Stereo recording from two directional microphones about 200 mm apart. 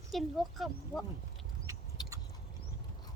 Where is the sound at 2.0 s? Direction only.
20° left (ahead or behind).